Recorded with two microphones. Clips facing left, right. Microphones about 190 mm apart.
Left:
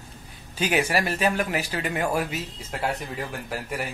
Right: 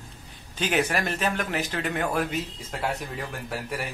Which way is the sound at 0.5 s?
10° left (ahead or behind).